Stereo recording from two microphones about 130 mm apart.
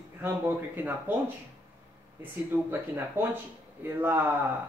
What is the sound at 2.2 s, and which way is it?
Speech, 15° right (ahead or behind).